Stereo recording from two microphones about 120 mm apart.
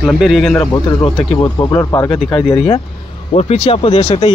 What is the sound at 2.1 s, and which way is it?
Speech, 40° left (ahead or behind).